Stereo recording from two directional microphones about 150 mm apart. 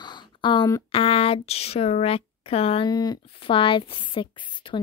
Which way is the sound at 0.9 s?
40° left (ahead or behind).